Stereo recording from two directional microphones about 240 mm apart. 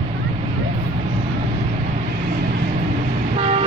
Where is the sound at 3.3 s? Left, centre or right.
Right.